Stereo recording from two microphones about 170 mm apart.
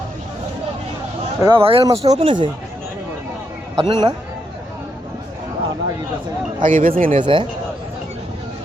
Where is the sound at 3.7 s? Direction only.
25° right (ahead or behind).